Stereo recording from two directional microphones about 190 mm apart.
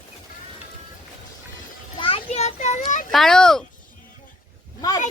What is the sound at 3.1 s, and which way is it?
Speech, centre (ahead or behind).